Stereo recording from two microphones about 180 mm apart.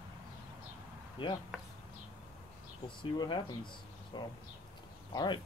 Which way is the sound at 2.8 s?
25° left (ahead or behind).